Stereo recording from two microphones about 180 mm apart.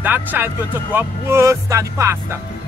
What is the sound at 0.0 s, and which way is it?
Speech, 10° right (ahead or behind).